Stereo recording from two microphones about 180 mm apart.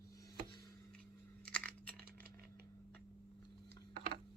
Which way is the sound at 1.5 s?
5° left (ahead or behind).